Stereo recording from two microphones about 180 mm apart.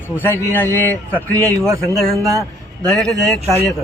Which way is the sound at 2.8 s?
5° left (ahead or behind).